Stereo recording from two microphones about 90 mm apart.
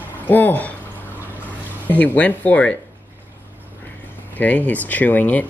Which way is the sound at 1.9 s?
20° left (ahead or behind).